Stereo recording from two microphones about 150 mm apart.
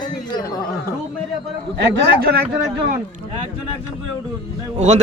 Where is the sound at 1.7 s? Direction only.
90° right.